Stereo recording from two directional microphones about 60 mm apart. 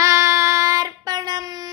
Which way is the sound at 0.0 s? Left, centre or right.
Right.